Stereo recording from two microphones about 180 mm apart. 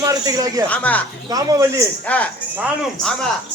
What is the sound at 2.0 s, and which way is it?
Speech, 10° left (ahead or behind).